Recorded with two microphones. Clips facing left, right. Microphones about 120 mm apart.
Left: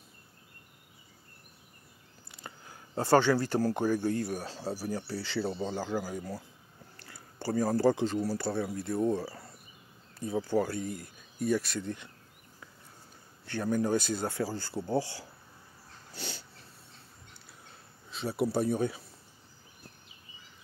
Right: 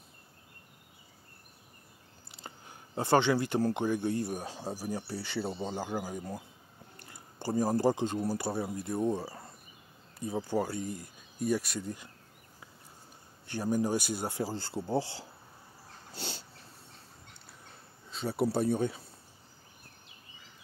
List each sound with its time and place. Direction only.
2.3 s a sound: 25° right (ahead or behind)
3.0 s speech: 20° right (ahead or behind)
13.5 s speech: 15° right (ahead or behind)
16.1 s dog: 30° right (ahead or behind)
18.1 s speech: 30° right (ahead or behind)